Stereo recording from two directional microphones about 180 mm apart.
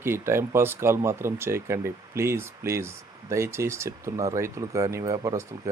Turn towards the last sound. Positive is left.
turn(degrees=-20)  # may be behind; listen again after turning